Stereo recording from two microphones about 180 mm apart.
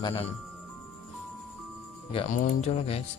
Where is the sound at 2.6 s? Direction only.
35° left (ahead or behind).